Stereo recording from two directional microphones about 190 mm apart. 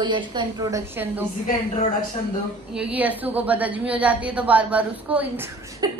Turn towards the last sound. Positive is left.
turn(degrees=-20)  # may be behind; listen again after turning